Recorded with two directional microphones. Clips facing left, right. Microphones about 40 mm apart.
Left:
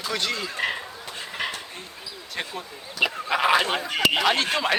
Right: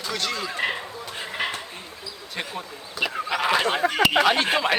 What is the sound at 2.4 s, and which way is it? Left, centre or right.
Speech, centre.